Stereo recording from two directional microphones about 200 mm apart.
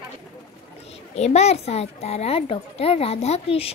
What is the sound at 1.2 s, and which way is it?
A child's voice, 35° left (ahead or behind).